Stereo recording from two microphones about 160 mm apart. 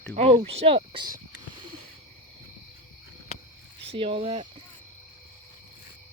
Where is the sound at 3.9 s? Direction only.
35° right (ahead or behind).